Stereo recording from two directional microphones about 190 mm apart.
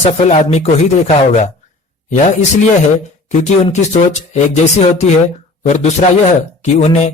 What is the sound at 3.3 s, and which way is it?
Speech, 35° left (ahead or behind).